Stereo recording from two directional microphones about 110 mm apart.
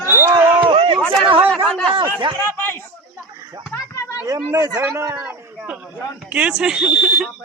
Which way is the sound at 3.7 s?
30° left (ahead or behind).